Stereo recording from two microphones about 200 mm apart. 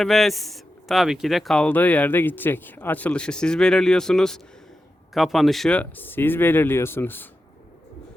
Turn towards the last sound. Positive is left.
turn(degrees=10)  # may be behind; listen again after turning